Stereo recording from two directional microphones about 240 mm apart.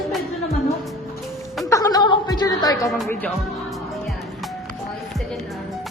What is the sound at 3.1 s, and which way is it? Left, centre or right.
Music, centre.